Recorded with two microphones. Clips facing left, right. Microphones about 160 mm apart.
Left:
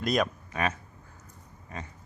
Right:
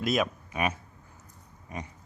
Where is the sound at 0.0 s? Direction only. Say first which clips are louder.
Even; 5° right (ahead or behind).